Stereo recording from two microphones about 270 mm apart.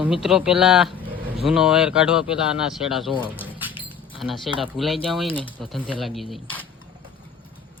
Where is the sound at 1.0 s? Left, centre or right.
Right.